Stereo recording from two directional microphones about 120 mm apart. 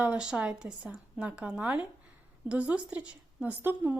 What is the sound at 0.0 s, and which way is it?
A woman's voice, 10° right (ahead or behind).